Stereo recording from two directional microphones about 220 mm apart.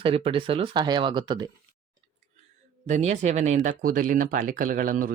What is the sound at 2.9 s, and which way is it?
Speech, 30° right (ahead or behind).